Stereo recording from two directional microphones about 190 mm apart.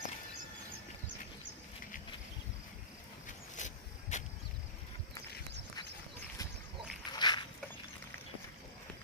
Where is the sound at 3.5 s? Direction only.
40° left (ahead or behind).